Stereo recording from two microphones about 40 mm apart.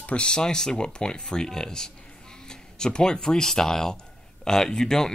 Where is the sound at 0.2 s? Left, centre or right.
Centre.